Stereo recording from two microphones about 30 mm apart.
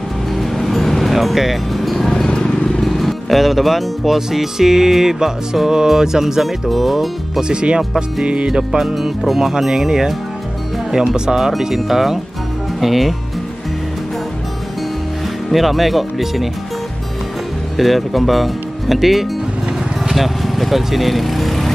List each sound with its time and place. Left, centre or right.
0.3 s music: centre
1.1 s music: centre
2.4 s vehicle: left
2.8 s music: centre
6.7 s speech: centre
8.5 s music: centre
8.9 s speech: centre
9.4 s music: centre
11.3 s music: centre
12.8 s speech: centre
15.5 s speech: centre
17.7 s speech: centre
20.1 s vehicle: centre